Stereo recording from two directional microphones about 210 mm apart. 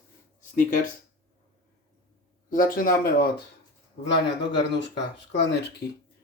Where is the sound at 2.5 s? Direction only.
40° left (ahead or behind).